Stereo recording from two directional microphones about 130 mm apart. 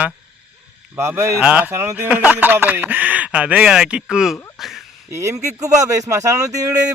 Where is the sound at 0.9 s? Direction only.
20° right (ahead or behind); by 4.8 s centre (ahead or behind).